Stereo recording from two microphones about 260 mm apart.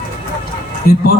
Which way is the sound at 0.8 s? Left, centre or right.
Left.